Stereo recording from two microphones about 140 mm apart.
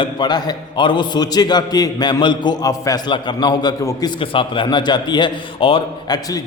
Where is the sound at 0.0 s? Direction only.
35° left (ahead or behind).